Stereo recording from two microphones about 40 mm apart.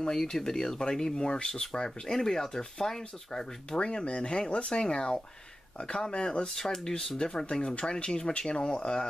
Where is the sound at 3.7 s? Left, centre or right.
Left.